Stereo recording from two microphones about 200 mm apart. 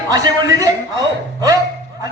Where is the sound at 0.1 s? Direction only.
20° right (ahead or behind).